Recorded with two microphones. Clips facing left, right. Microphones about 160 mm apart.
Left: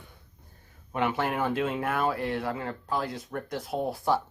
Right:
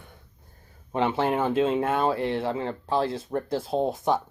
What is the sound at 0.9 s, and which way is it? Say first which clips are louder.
Speech: right 4 dB; 30° right (ahead or behind).